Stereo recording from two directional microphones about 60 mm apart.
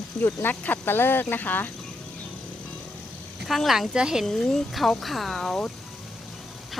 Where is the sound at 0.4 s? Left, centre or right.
Left.